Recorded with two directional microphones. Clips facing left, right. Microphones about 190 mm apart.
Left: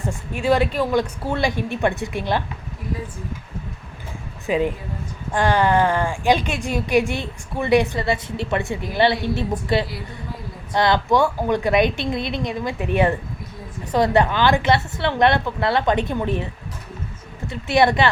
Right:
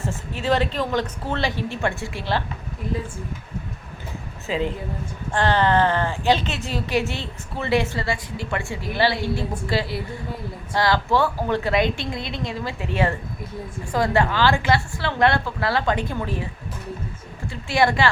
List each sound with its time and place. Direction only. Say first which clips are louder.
0.0 s speech: left 3 dB; 15° left (ahead or behind)
4.4 s a woman's voice: left 4 dB; 15° left (ahead or behind)
17.5 s a woman's voice: left 3 dB; 20° left (ahead or behind)